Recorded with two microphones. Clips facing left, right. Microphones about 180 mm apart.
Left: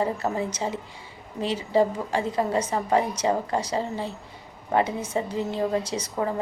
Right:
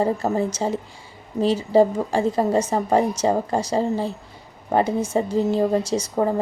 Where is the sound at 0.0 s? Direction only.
40° right (ahead or behind).